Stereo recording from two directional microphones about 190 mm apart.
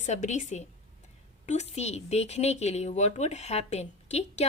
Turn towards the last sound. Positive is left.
turn(degrees=35)  # may be behind; listen again after turning